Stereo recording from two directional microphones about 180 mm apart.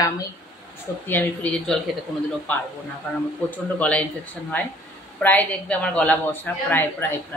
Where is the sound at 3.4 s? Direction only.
10° left (ahead or behind).